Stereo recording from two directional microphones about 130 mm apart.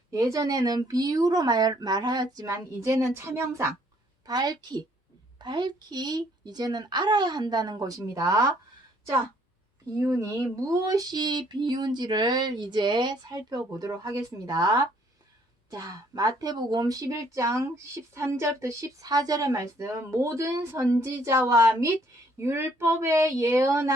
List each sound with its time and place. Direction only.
0.1 s a woman's voice: 25° right (ahead or behind)
4.3 s speech: 30° right (ahead or behind)
10.0 s a woman's voice: 20° right (ahead or behind)